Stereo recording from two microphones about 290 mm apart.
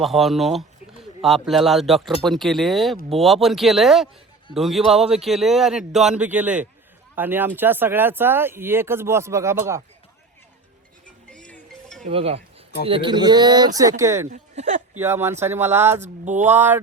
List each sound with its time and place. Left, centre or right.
0.0 s speech: centre
11.3 s music: centre
12.0 s speech: centre
14.3 s speech: right
14.9 s speech: centre
16.0 s speech: right
16.5 s speech: centre